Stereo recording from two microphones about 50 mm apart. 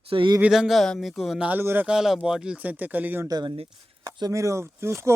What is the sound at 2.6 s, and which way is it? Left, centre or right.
Speech, right.